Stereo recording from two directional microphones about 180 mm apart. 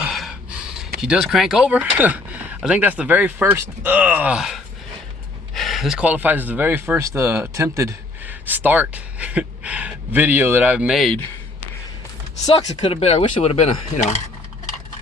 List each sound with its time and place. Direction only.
0.0 s gasp: centre (ahead or behind)
0.9 s speech: 5° right (ahead or behind)
12.5 s speech: 25° left (ahead or behind)